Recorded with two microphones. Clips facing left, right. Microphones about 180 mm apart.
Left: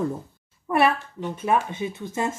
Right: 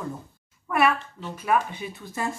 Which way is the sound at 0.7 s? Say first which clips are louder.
Left 2 dB; 30° left (ahead or behind).